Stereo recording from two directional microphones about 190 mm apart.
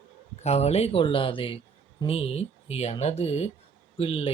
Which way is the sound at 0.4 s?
35° left (ahead or behind).